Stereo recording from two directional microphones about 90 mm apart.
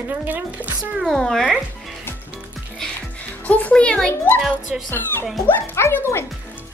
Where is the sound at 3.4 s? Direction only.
15° left (ahead or behind).